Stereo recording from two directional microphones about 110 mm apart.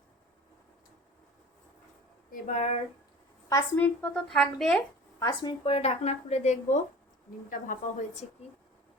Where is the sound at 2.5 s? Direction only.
85° left.